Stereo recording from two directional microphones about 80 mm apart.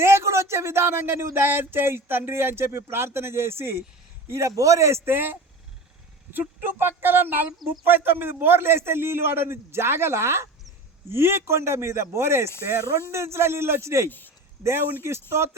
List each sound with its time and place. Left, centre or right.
0.0 s speech: right
14.1 s speech: left
14.6 s speech: right